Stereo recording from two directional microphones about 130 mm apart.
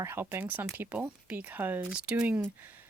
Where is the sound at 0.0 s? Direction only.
15° right (ahead or behind).